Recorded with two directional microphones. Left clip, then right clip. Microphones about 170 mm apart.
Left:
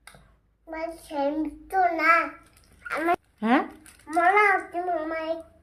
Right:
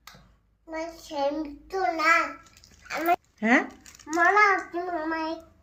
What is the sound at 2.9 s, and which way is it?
Speech, 10° left (ahead or behind).